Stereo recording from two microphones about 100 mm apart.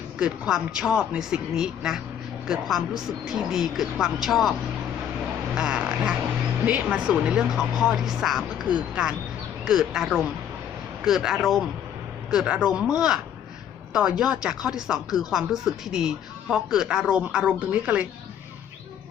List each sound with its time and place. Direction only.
0.2 s speech: 10° right (ahead or behind)
5.5 s speech: 10° right (ahead or behind)